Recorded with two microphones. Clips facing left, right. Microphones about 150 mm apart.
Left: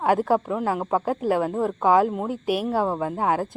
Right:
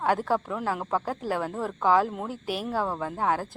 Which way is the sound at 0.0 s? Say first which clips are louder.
Left 5 dB; 10° left (ahead or behind).